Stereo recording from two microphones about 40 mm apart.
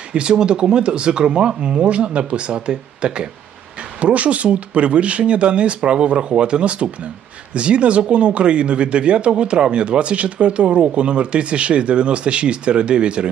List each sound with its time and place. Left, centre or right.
0.1 s speech: right
4.0 s speech: right